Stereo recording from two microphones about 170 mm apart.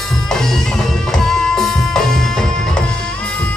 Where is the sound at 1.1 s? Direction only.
Centre (ahead or behind).